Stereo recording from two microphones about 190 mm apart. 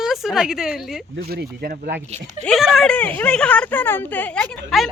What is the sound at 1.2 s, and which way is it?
Speech, 55° right (ahead or behind).